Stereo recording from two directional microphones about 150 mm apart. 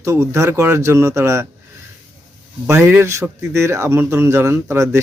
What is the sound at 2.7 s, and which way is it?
Speech, 15° right (ahead or behind).